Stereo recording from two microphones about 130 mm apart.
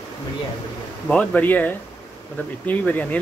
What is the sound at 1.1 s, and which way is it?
Speech, 10° left (ahead or behind).